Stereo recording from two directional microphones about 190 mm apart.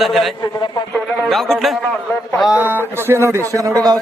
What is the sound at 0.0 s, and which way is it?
A man's voice, centre (ahead or behind).